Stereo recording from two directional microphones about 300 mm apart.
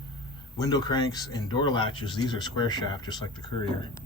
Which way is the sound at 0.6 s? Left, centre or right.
Centre.